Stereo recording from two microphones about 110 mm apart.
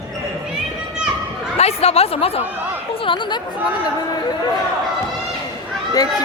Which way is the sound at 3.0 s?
50° left (ahead or behind).